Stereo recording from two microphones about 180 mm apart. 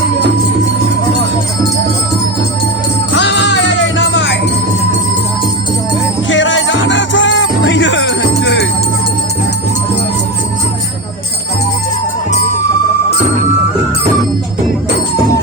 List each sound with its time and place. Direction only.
3.2 s music: 75° left (ahead or behind)
6.2 s music: 90° left; by 8.6 s 70° left (ahead or behind)